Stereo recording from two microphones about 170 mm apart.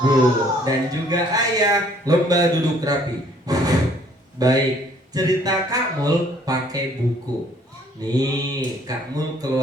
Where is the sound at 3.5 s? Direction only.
20° right (ahead or behind).